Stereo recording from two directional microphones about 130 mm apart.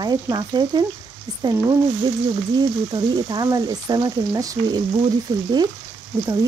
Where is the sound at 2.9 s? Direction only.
30° right (ahead or behind).